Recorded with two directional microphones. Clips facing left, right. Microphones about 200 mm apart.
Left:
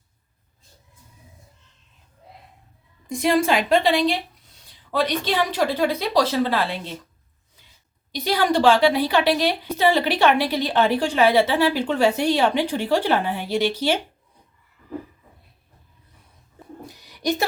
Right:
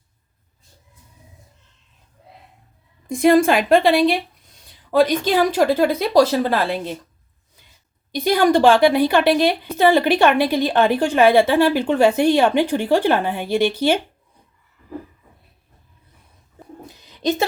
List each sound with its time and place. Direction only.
3.1 s a woman's voice: 50° right (ahead or behind)
8.1 s a woman's voice: 50° right (ahead or behind)
16.9 s a sound: 20° right (ahead or behind)